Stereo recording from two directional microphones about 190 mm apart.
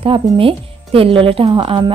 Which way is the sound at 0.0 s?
30° right (ahead or behind).